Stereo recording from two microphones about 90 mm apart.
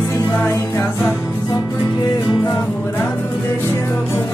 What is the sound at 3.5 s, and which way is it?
Speech, 30° left (ahead or behind).